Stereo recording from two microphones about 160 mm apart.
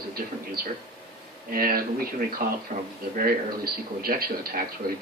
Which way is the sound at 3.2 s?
70° right (ahead or behind).